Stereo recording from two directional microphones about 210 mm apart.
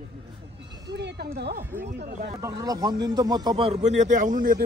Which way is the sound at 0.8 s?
55° right (ahead or behind).